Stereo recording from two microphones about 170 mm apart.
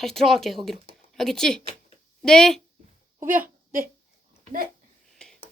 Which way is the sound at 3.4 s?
55° right (ahead or behind).